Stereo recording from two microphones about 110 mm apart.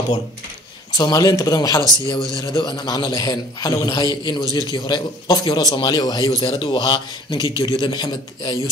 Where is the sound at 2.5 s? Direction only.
45° left (ahead or behind).